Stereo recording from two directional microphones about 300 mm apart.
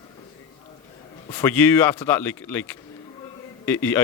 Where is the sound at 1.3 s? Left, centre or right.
Centre.